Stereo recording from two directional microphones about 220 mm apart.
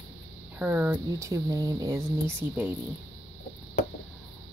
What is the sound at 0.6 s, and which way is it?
Speech, 10° right (ahead or behind).